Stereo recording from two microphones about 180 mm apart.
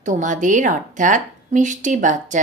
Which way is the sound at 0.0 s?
45° right (ahead or behind).